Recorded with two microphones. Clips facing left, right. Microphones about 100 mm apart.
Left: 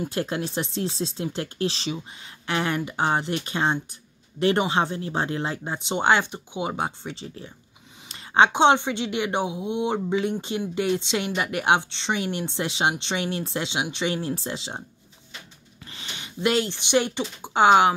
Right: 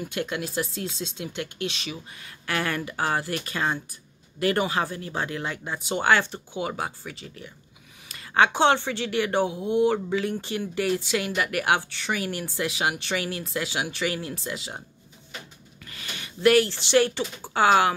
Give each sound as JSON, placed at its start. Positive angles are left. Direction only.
{"t": 0.0, "sound": "speech", "side_deg": 35}
{"t": 15.8, "sound": "speech", "side_deg": 25}